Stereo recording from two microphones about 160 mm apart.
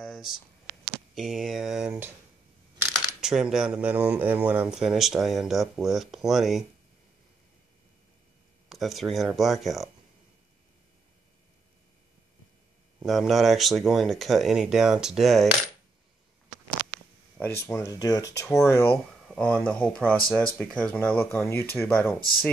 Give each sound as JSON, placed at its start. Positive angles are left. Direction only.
{"t": 0.0, "sound": "a sound", "side_deg": 0}
{"t": 1.1, "sound": "speech", "side_deg": 0}
{"t": 3.2, "sound": "speech", "side_deg": -5}
{"t": 8.6, "sound": "speech", "side_deg": 0}
{"t": 13.0, "sound": "speech", "side_deg": 0}
{"t": 17.4, "sound": "speech", "side_deg": 15}
{"t": 19.3, "sound": "speech", "side_deg": 5}